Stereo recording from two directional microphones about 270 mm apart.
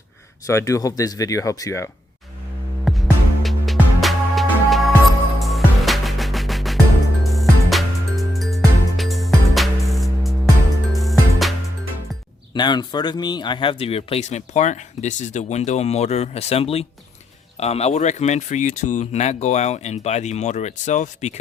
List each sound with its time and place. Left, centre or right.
0.4 s speech: centre
2.8 s music: centre
12.5 s speech: centre